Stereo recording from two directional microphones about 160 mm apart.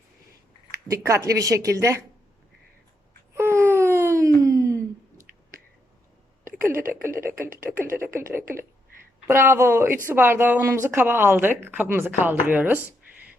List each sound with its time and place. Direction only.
0.9 s speech: 20° right (ahead or behind)
3.3 s wail: 15° right (ahead or behind)
4.4 s a sound: 20° right (ahead or behind)
7.2 s speech: 15° right (ahead or behind)